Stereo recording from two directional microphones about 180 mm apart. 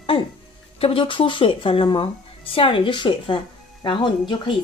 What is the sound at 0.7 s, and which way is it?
Speech, 30° left (ahead or behind).